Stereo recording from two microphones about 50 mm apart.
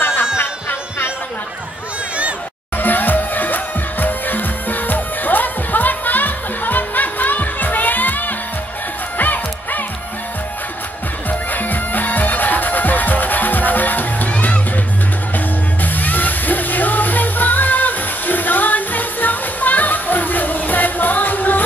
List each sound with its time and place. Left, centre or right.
0.0 s music: left
2.8 s music: left
11.2 s music: left